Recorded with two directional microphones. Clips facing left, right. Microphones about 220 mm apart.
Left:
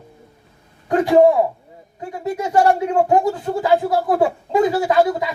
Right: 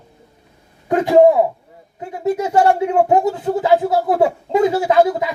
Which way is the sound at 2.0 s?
20° right (ahead or behind).